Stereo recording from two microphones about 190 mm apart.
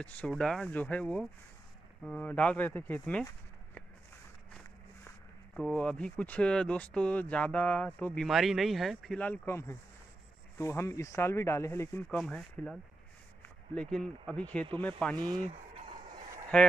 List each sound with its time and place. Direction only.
0.0 s speech: 5° left (ahead or behind)
5.6 s speech: 5° left (ahead or behind)
12.2 s speech: centre (ahead or behind)
13.7 s speech: 5° left (ahead or behind)
15.1 s speech: 20° right (ahead or behind)
15.4 s a sound: 30° right (ahead or behind)
16.5 s speech: 5° left (ahead or behind)